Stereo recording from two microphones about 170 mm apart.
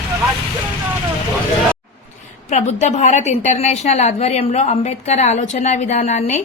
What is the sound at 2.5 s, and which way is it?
A woman's voice, 45° left (ahead or behind).